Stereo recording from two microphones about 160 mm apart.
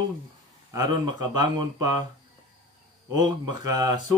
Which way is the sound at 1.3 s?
25° right (ahead or behind).